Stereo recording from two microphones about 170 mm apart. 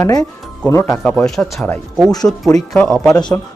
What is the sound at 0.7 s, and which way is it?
Speech, 15° left (ahead or behind).